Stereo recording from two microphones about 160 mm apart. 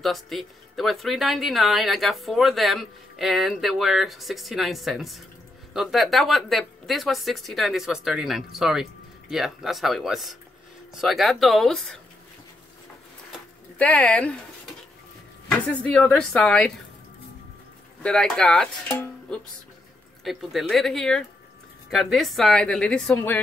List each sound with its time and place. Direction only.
0.0 s speech: centre (ahead or behind)
13.7 s speech: 10° left (ahead or behind)
15.5 s speech: 10° left (ahead or behind)
18.0 s speech: 5° left (ahead or behind)
18.9 s speech: 15° left (ahead or behind)
20.2 s speech: centre (ahead or behind)